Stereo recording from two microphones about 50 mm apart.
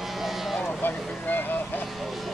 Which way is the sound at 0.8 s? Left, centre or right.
Left.